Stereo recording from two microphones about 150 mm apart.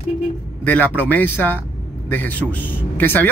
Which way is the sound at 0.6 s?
10° left (ahead or behind).